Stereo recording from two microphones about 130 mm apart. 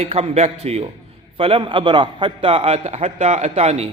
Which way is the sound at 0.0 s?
55° right (ahead or behind).